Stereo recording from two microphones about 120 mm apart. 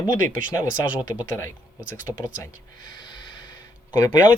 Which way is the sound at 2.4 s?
35° left (ahead or behind).